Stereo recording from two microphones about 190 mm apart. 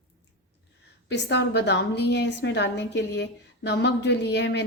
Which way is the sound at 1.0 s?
65° left (ahead or behind).